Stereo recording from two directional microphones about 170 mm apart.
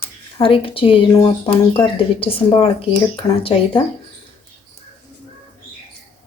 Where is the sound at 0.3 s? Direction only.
30° left (ahead or behind).